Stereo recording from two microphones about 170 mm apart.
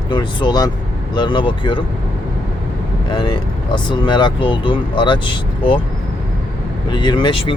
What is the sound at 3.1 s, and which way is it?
Speech, 25° left (ahead or behind).